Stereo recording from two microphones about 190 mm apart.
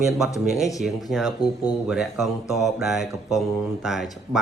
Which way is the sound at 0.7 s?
Centre (ahead or behind).